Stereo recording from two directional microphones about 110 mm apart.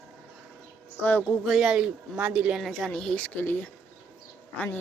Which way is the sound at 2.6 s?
Centre (ahead or behind).